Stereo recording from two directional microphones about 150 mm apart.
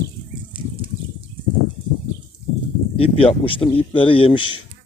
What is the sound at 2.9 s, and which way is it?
Speech, 40° left (ahead or behind).